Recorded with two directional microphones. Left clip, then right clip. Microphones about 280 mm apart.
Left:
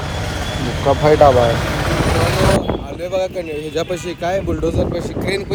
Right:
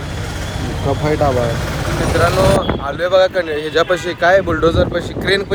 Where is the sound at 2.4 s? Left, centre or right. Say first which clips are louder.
Right 2 dB; centre.